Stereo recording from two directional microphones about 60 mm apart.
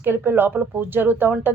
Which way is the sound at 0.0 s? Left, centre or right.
Right.